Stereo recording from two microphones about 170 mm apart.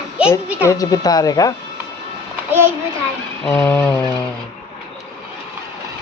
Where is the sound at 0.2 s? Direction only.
5° right (ahead or behind).